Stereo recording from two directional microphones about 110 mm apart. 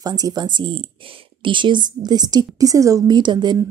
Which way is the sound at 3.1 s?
40° right (ahead or behind).